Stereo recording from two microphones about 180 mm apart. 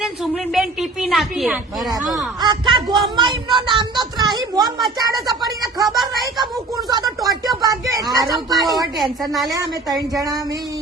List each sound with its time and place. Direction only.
0.0 s a woman's voice: centre (ahead or behind)
2.4 s a woman's voice: 25° right (ahead or behind)
6.7 s a sound: 20° right (ahead or behind)
9.0 s a woman's voice: centre (ahead or behind)
10.2 s a woman's voice: 20° right (ahead or behind)